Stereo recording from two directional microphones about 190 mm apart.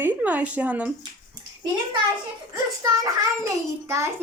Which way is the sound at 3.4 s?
15° right (ahead or behind).